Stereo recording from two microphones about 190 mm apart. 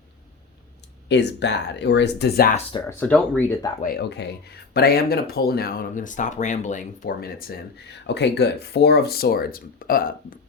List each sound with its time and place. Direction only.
1.0 s speech: 65° left (ahead or behind)
3.0 s speech: 10° left (ahead or behind)
3.8 s speech: 55° left (ahead or behind)
8.0 s speech: 65° left (ahead or behind); by 10.3 s 50° left (ahead or behind)